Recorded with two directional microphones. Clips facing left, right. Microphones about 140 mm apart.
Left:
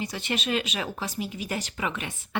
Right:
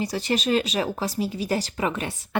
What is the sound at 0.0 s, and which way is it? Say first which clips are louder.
Speech: right 6 dB; 35° right (ahead or behind).